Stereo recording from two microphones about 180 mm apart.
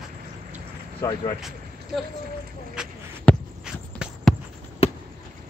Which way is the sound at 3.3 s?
10° left (ahead or behind).